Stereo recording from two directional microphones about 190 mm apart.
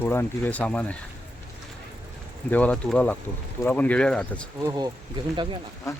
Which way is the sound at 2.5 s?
5° left (ahead or behind).